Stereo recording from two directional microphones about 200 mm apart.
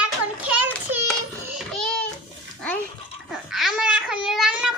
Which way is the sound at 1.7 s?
5° left (ahead or behind).